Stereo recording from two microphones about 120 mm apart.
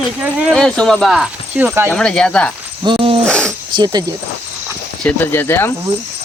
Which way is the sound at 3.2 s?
10° left (ahead or behind).